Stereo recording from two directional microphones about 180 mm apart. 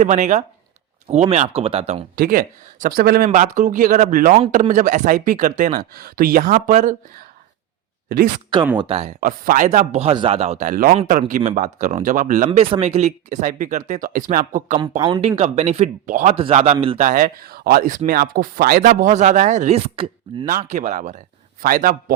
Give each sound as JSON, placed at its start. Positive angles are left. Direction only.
{"t": 0.0, "sound": "a man's voice", "side_deg": -45}
{"t": 2.1, "sound": "speech", "side_deg": -50}
{"t": 3.2, "sound": "speech", "side_deg": -45}
{"t": 5.9, "sound": "speech", "side_deg": -55}
{"t": 8.8, "sound": "a man's voice", "side_deg": -35}
{"t": 9.2, "sound": "speech", "side_deg": -50}
{"t": 12.5, "sound": "speech", "side_deg": -35}
{"t": 14.8, "sound": "speech", "side_deg": -25}
{"t": 15.4, "sound": "a man's voice", "side_deg": -35}
{"t": 17.0, "sound": "speech", "side_deg": -50}